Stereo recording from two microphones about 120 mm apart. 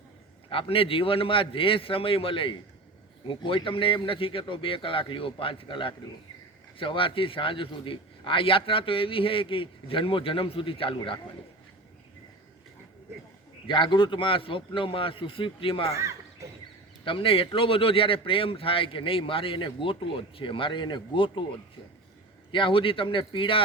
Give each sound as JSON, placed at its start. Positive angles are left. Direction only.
{"t": 0.5, "sound": "speech", "side_deg": 50}
{"t": 13.7, "sound": "speech", "side_deg": 40}
{"t": 16.0, "sound": "a sound", "side_deg": -25}
{"t": 17.0, "sound": "speech", "side_deg": 45}
{"t": 22.5, "sound": "speech", "side_deg": 45}